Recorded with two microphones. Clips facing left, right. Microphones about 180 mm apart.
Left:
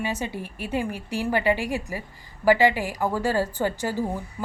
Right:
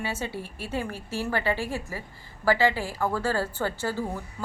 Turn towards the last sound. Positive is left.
turn(degrees=15)  # may be behind; listen again after turning